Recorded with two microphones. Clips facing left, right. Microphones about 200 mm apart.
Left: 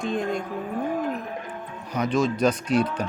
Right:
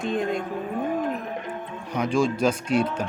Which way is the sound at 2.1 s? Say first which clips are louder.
Even; 30° right (ahead or behind).